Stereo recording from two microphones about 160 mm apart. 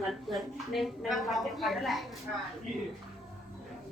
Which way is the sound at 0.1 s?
Centre (ahead or behind).